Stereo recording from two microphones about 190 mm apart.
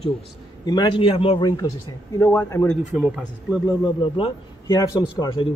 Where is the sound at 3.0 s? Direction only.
5° right (ahead or behind).